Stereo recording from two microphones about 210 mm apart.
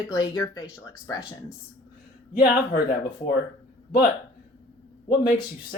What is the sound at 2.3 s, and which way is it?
Speech, 45° left (ahead or behind).